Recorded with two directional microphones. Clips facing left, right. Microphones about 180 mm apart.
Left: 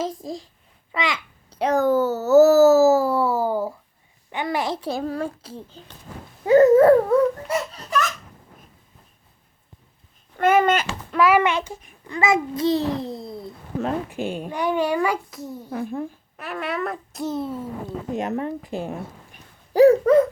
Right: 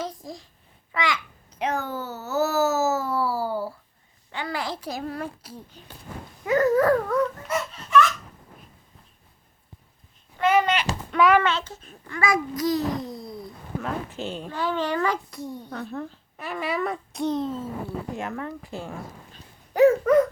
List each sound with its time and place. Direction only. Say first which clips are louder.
0.0 s a child's voice: left 6 dB; 25° left (ahead or behind)
0.9 s babbling: left 1 dB; 25° left (ahead or behind)
4.3 s a child's voice: left 5 dB; 20° left (ahead or behind); by 8.1 s 40° left (ahead or behind)
10.3 s babbling: left 3 dB; 50° left (ahead or behind)
11.1 s a child's voice: left 1 dB; centre (ahead or behind)
11.3 s a child's voice: left 3 dB; 15° left (ahead or behind)
14.1 s speech: left 5 dB; 10° left (ahead or behind)
16.4 s speech: even; centre (ahead or behind); by 19.4 s 15° left (ahead or behind)
19.7 s a sound: left 3 dB; 35° left (ahead or behind)